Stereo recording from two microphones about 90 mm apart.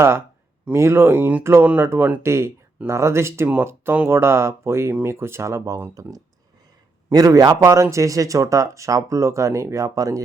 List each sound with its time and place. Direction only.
0.7 s speech: 30° right (ahead or behind)
2.2 s a man's voice: 30° right (ahead or behind)